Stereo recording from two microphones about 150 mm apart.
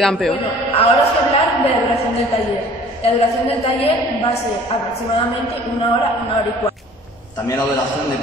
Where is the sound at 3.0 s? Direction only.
45° left (ahead or behind).